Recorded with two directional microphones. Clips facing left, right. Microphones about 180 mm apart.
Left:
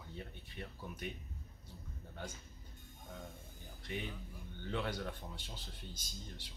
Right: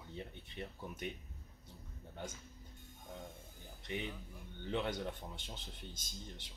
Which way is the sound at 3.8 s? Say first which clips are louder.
Right 1 dB; 20° right (ahead or behind).